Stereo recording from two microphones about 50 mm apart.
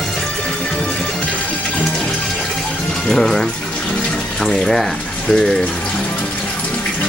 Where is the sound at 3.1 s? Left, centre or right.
Centre.